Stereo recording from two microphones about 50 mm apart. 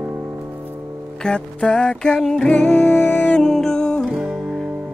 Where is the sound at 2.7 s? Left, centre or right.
Left.